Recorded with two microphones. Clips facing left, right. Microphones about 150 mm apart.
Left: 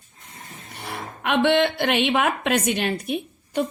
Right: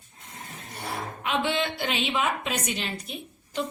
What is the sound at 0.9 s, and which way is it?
A woman's voice, 65° left (ahead or behind).